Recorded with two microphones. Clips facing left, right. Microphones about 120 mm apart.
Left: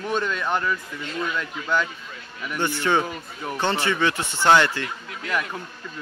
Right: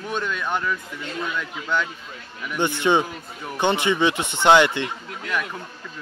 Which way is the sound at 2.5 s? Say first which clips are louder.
Right 2 dB; 20° right (ahead or behind).